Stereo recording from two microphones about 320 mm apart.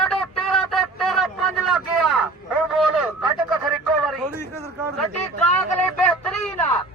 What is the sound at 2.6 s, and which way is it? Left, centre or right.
Vehicle, centre.